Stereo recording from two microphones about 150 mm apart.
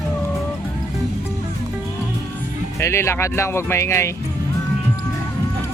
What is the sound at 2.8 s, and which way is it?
Speech, 20° left (ahead or behind).